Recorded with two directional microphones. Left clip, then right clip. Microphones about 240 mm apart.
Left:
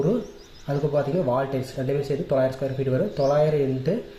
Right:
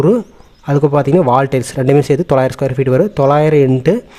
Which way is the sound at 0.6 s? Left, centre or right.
Right.